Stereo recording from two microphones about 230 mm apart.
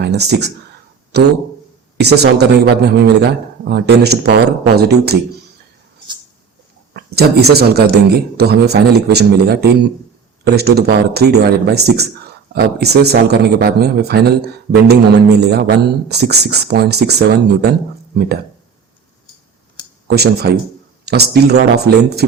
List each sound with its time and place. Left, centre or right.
0.0 s a man's voice: right
6.9 s a man's voice: right
20.1 s a man's voice: right